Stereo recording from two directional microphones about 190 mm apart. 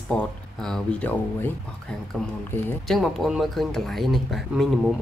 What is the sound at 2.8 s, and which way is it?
Speech, centre (ahead or behind).